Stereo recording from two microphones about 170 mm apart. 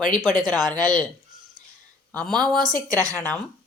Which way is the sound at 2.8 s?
20° right (ahead or behind).